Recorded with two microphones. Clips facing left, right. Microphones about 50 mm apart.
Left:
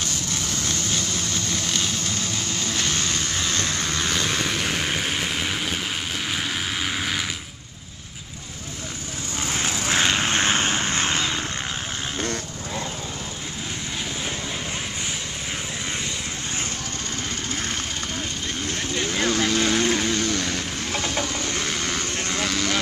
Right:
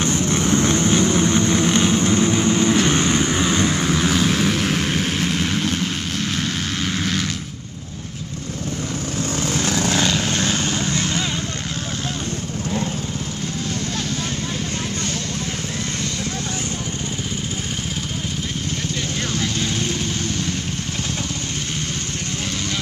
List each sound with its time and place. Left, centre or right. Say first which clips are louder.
0.0 s vehicle: right 9 dB; right; by 7.2 s centre
9.8 s vehicle: right 1 dB; left
19.1 s vehicle: left 5 dB; left